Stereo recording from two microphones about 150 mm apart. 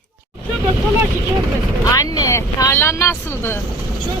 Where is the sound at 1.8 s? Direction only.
20° left (ahead or behind).